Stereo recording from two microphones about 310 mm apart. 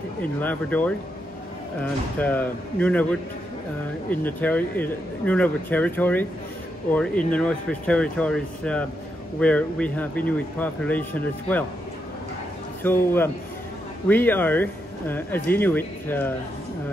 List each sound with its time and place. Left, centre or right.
0.2 s speech: centre
2.1 s speech: centre
12.8 s speech: centre